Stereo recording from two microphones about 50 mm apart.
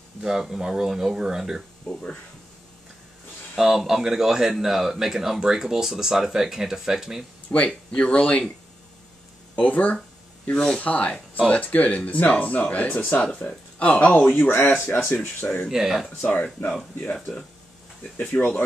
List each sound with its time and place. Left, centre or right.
0.2 s a man's voice: centre
1.9 s speech: centre
3.5 s a man's voice: centre
7.5 s speech: left
9.6 s speech: left
10.5 s speech: centre
10.8 s speech: left
12.8 s speech: left
13.2 s speech: left
14.5 s speech: left
15.7 s a man's voice: centre
16.2 s speech: left